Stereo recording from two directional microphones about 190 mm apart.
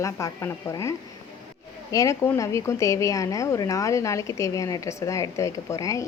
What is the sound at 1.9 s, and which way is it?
A woman's voice, 15° left (ahead or behind).